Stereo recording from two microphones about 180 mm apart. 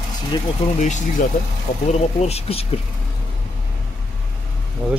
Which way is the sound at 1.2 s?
45° left (ahead or behind).